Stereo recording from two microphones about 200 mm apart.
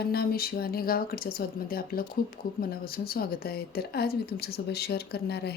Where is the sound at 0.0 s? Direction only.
50° left (ahead or behind).